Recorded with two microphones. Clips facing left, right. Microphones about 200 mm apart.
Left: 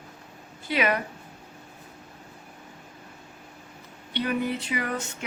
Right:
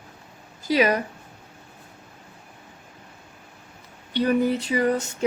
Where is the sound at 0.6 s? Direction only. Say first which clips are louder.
Right 5 dB; 40° right (ahead or behind).